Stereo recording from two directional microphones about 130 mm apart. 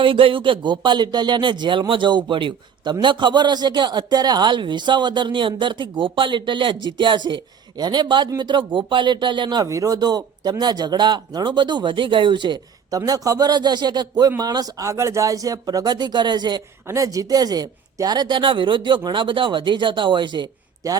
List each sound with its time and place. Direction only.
0.0 s speech: 45° right (ahead or behind)
13.0 s speech: 25° right (ahead or behind)